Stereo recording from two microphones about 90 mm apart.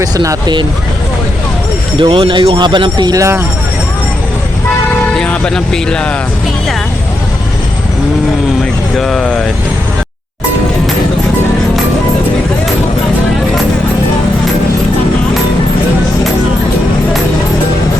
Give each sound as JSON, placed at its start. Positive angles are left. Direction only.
{"t": 0.0, "sound": "speech", "side_deg": -45}
{"t": 2.0, "sound": "speech", "side_deg": -70}
{"t": 2.6, "sound": "speech", "side_deg": -60}
{"t": 3.2, "sound": "speech", "side_deg": -30}
{"t": 5.1, "sound": "speech", "side_deg": 10}
{"t": 9.0, "sound": "speech", "side_deg": 5}